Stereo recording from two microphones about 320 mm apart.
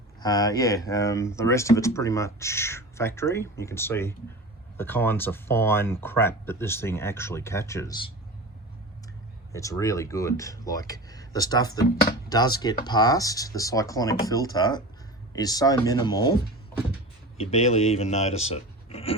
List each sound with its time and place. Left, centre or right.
0.2 s speech: centre
9.5 s speech: centre
17.3 s speech: centre